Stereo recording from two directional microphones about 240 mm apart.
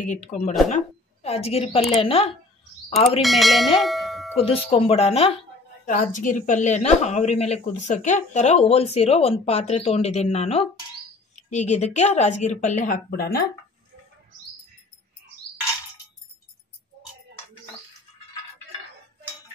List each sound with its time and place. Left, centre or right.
0.0 s a woman's voice: left
3.2 s speech: centre
3.8 s a sound: centre
4.4 s a woman's voice: left